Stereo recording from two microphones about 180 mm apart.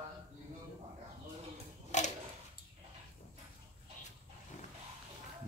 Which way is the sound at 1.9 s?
40° left (ahead or behind).